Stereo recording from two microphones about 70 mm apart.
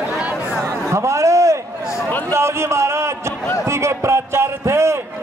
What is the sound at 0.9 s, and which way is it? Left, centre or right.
A man's voice, right.